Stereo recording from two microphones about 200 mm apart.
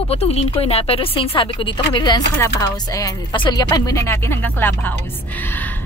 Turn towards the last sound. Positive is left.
turn(degrees=10)  # may be behind; listen again after turning